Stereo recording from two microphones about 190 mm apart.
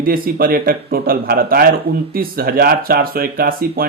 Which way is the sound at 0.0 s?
50° right (ahead or behind).